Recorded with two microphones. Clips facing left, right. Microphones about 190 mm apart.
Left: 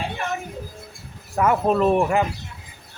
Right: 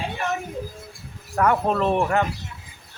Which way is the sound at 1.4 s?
5° left (ahead or behind).